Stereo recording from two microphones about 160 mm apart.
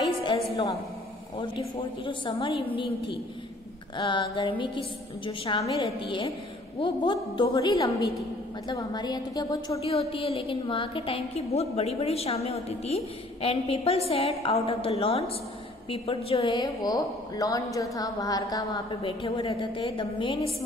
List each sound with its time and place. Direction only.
0.2 s a woman's voice: 25° left (ahead or behind)
9.8 s a woman's voice: 35° left (ahead or behind)
16.6 s a woman's voice: 25° left (ahead or behind)
19.0 s a woman's voice: 35° left (ahead or behind)